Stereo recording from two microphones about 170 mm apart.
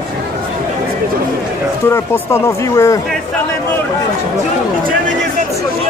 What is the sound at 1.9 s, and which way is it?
Speech, 15° left (ahead or behind).